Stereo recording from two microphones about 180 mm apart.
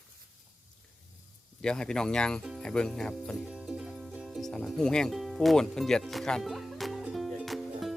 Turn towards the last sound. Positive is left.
turn(degrees=0)  # may be behind; listen again after turning